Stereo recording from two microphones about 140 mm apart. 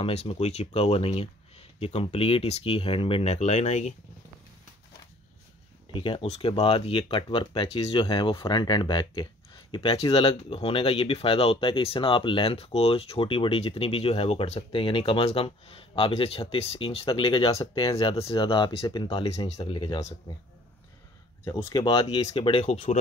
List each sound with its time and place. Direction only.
0.0 s speech: 45° left (ahead or behind)
5.9 s speech: 35° left (ahead or behind)
6.2 s speech: 45° left (ahead or behind)
17.6 s speech: 25° left (ahead or behind)
17.9 s speech: 45° left (ahead or behind)
19.6 s speech: 35° left (ahead or behind)
20.0 s speech: 20° left (ahead or behind)
21.5 s speech: 30° left (ahead or behind)